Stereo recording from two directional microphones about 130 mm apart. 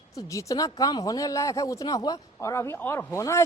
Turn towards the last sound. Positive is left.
turn(degrees=20)  # may be behind; listen again after turning